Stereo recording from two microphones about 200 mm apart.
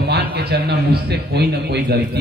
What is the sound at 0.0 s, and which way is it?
A man's voice, 55° right (ahead or behind).